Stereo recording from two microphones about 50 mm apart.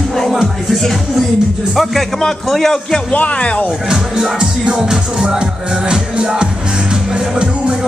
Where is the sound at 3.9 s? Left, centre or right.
Centre.